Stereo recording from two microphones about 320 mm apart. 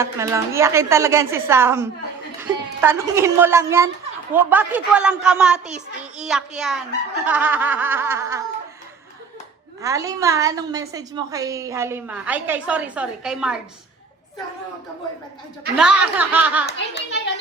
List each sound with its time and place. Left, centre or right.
0.0 s a woman's voice: centre
9.8 s a woman's voice: centre
15.8 s a child's voice: centre
16.6 s a child's voice: left